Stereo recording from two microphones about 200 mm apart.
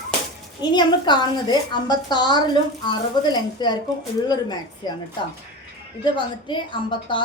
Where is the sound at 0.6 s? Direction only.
20° left (ahead or behind).